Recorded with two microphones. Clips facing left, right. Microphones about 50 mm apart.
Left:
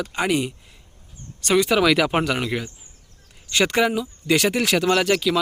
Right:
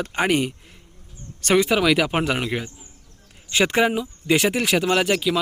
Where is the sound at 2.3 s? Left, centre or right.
Centre.